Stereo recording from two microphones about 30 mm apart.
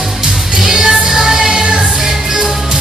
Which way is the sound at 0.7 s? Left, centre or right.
Centre.